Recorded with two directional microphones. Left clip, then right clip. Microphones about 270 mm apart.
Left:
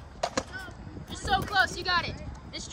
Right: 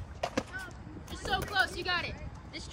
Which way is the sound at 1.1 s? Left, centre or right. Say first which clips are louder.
Left 6 dB; left.